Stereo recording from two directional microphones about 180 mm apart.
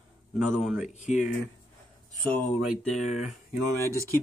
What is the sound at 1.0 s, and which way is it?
Speech, 45° left (ahead or behind).